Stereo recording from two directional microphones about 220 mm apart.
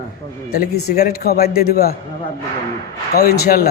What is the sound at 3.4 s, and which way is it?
Speech, 45° left (ahead or behind).